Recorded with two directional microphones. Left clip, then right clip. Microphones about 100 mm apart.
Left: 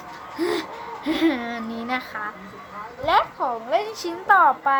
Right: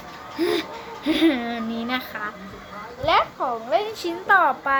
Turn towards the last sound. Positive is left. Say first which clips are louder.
# left 2 dB
turn(degrees=-5)  # may be behind; listen again after turning